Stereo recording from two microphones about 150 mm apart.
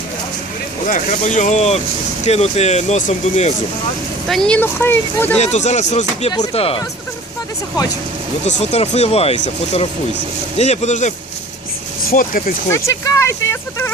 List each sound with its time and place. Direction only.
0.9 s speech: 55° left (ahead or behind)
4.3 s speech: 5° left (ahead or behind)
5.4 s speech: 50° left (ahead or behind)
6.5 s speech: 40° left (ahead or behind)
8.4 s speech: 50° left (ahead or behind)
12.1 s speech: 70° left (ahead or behind)
12.7 s speech: 20° left (ahead or behind)